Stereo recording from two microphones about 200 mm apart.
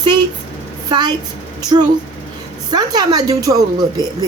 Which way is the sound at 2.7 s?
20° right (ahead or behind).